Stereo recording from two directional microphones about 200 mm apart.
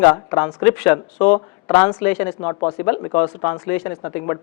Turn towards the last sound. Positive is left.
turn(degrees=15)  # may be behind; listen again after turning